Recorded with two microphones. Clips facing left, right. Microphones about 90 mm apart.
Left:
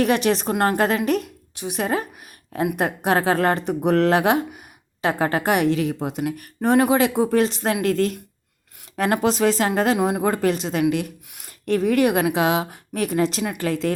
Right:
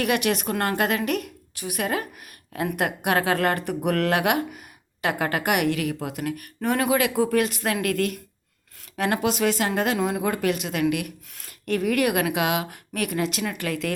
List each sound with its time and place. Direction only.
0.0 s a woman's voice: 30° left (ahead or behind)
0.8 s a woman's voice: 30° left (ahead or behind)
11.3 s speech: 15° left (ahead or behind)
11.6 s a woman's voice: 30° left (ahead or behind)